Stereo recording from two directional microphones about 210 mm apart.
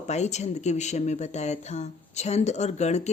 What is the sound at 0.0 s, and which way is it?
Speech, 30° left (ahead or behind).